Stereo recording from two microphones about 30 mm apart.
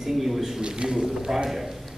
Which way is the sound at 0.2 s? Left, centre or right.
Centre.